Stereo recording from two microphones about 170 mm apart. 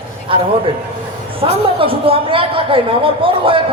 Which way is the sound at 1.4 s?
30° right (ahead or behind).